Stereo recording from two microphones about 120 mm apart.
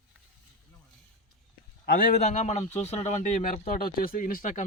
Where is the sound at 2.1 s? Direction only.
80° left.